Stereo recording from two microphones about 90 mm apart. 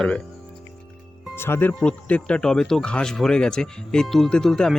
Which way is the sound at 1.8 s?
15° left (ahead or behind).